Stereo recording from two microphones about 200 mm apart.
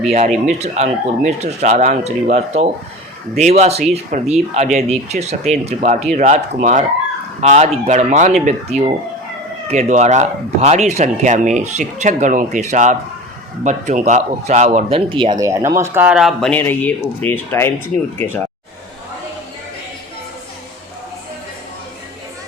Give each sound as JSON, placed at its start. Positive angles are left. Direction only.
{"t": 0.1, "sound": "speech", "side_deg": -35}